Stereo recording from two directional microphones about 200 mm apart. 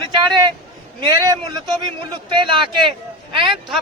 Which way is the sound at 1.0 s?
20° right (ahead or behind).